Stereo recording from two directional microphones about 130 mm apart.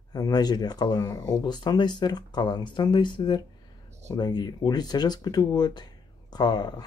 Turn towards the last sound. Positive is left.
turn(degrees=30)  # may be behind; listen again after turning